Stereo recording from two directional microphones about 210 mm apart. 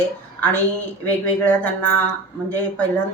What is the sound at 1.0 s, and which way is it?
Speech, 10° left (ahead or behind).